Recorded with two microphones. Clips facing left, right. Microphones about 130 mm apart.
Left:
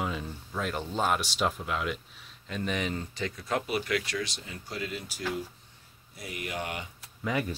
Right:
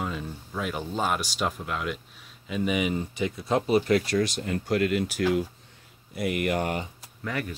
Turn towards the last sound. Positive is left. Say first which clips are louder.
# left 1 dB
turn(degrees=15)  # may be behind; listen again after turning